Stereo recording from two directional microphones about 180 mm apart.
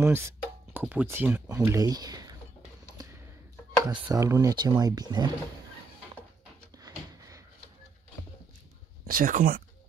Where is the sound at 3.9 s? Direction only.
20° right (ahead or behind).